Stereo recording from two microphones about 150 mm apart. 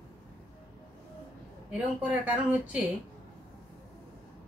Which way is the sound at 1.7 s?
10° right (ahead or behind).